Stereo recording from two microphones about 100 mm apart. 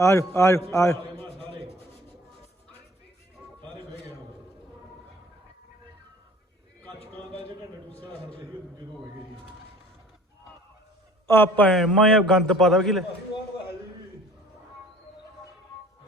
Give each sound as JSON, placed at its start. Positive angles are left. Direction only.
{"t": 0.0, "sound": "a man's voice", "side_deg": 30}
{"t": 11.3, "sound": "a man's voice", "side_deg": 20}
{"t": 11.7, "sound": "a man's voice", "side_deg": 5}